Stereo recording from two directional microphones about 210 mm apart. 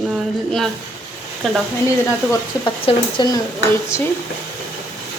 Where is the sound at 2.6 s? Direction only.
20° left (ahead or behind).